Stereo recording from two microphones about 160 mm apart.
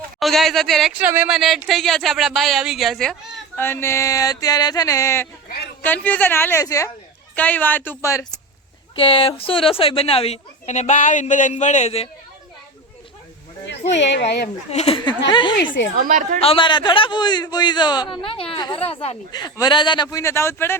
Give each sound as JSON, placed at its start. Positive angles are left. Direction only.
{"t": 0.2, "sound": "speech", "side_deg": 0}
{"t": 3.6, "sound": "music", "side_deg": 15}
{"t": 5.8, "sound": "a woman's voice", "side_deg": 10}
{"t": 9.0, "sound": "a woman's voice", "side_deg": 35}
{"t": 14.3, "sound": "speech", "side_deg": 90}
{"t": 14.7, "sound": "a woman's voice", "side_deg": 40}
{"t": 16.0, "sound": "a woman's voice", "side_deg": -55}
{"t": 16.4, "sound": "a woman's voice", "side_deg": 35}
{"t": 19.3, "sound": "music", "side_deg": 25}